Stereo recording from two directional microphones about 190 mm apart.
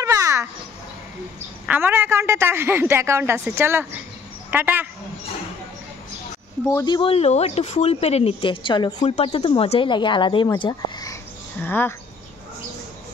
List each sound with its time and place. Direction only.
0.0 s a sound: 15° right (ahead or behind)
1.7 s a woman's voice: 10° right (ahead or behind)
6.7 s speech: 20° left (ahead or behind)